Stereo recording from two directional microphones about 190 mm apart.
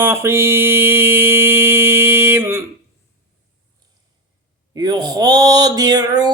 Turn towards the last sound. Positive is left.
turn(degrees=-20)  # may be behind; listen again after turning